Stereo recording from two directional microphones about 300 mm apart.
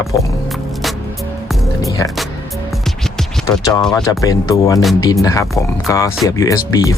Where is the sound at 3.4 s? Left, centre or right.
Centre.